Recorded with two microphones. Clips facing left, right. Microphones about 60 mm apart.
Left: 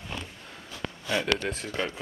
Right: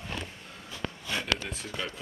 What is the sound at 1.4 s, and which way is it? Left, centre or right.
Speech, left.